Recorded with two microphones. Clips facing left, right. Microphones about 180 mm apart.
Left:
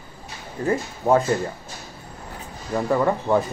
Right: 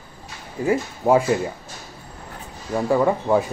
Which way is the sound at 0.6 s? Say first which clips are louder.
Right 2 dB; 10° right (ahead or behind).